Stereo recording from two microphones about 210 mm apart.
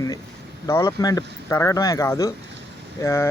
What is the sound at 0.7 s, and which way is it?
Speech, 15° left (ahead or behind).